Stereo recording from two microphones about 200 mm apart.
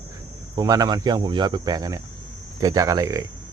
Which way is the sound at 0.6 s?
20° right (ahead or behind).